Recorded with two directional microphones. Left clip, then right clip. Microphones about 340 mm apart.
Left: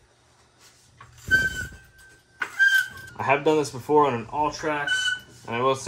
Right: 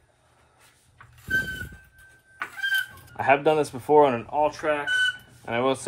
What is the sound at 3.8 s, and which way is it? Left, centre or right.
Speech, right.